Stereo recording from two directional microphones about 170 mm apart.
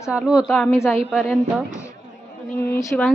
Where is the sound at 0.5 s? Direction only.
5° left (ahead or behind).